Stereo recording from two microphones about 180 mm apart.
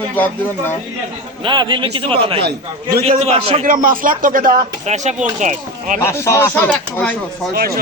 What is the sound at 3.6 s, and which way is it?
Speech, 50° right (ahead or behind).